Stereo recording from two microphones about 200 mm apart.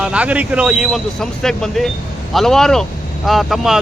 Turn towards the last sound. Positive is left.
turn(degrees=0)  # may be behind; listen again after turning